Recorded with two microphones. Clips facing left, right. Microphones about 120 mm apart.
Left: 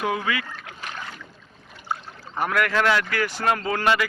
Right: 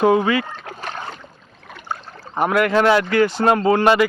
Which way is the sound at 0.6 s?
35° right (ahead or behind).